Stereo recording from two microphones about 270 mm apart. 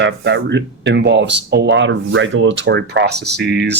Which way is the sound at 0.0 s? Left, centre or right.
Right.